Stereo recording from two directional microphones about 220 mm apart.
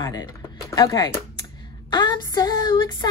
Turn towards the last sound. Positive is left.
turn(degrees=20)  # may be behind; listen again after turning